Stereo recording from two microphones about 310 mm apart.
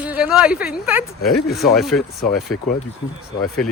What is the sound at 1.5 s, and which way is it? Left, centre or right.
Speech, centre.